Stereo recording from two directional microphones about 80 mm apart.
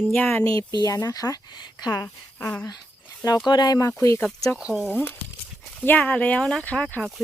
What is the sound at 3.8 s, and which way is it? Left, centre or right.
Speech, left.